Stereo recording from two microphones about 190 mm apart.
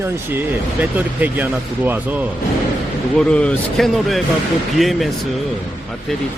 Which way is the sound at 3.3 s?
5° left (ahead or behind).